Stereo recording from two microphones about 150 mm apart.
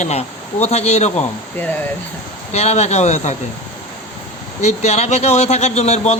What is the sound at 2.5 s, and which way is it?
Speech, 45° left (ahead or behind).